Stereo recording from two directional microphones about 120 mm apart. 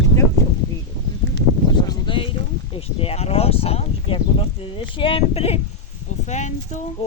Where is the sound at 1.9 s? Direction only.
45° left (ahead or behind).